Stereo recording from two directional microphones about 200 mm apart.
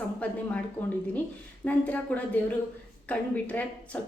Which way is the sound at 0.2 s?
5° left (ahead or behind).